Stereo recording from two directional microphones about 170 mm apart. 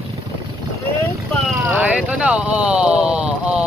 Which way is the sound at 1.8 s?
5° right (ahead or behind).